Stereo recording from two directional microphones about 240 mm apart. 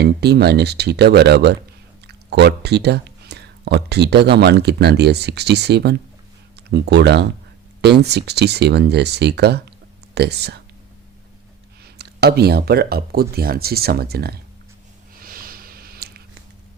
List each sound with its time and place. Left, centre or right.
0.0 s speech: right
11.9 s speech: right
15.1 s snort: right